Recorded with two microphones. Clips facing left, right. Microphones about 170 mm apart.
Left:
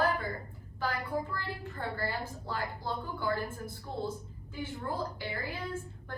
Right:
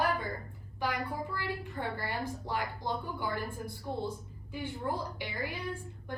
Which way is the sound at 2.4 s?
15° right (ahead or behind).